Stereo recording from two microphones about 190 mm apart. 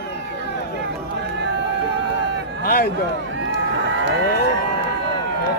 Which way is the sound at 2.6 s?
50° left (ahead or behind).